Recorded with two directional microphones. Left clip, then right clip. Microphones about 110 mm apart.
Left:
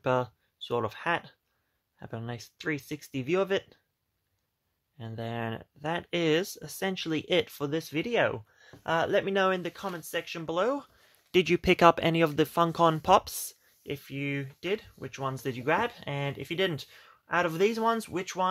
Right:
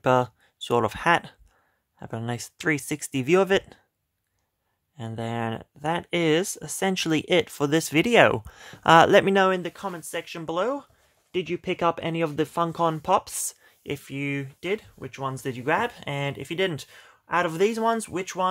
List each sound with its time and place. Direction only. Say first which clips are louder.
0.0 s speech: right 7 dB; 40° right (ahead or behind)
0.6 s speech: right 7 dB; 60° right (ahead or behind)
2.0 s speech: right 6 dB; 30° right (ahead or behind)
2.2 s speech: right 8 dB; 50° right (ahead or behind)
4.9 s speech: right 5 dB; 40° right (ahead or behind)
6.9 s speech: right 8 dB; 50° right (ahead or behind)
7.2 s speech: right 3 dB; 35° right (ahead or behind)
7.6 s speech: right 9 dB; 90° right
9.5 s speech: right 4 dB; 25° right (ahead or behind)
11.3 s speech: left 4 dB; 35° left (ahead or behind); by 12.3 s 15° left (ahead or behind)
12.3 s speech: even; 5° left (ahead or behind)
13.5 s speech: right 5 dB; 30° right (ahead or behind)
15.0 s speech: right 3 dB; 10° right (ahead or behind)